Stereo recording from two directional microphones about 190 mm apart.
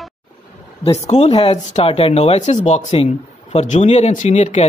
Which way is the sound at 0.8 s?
30° left (ahead or behind).